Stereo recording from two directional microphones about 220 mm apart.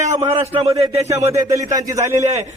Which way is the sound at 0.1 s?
30° right (ahead or behind).